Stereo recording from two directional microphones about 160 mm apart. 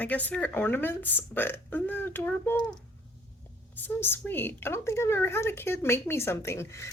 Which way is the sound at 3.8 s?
15° left (ahead or behind).